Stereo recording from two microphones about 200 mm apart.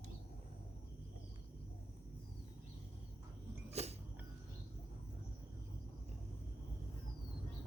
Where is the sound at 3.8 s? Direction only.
30° right (ahead or behind).